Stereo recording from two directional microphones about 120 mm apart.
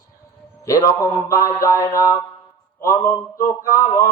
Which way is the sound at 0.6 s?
30° left (ahead or behind).